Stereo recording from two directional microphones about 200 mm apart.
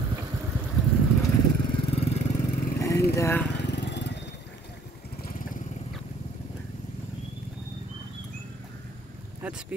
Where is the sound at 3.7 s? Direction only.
60° left (ahead or behind).